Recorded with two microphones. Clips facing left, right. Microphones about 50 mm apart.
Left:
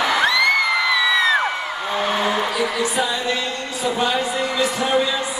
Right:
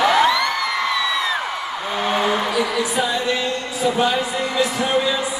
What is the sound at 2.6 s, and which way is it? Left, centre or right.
A man's voice, centre.